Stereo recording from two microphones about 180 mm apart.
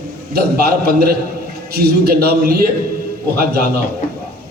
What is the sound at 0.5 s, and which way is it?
A man's voice, 60° right (ahead or behind).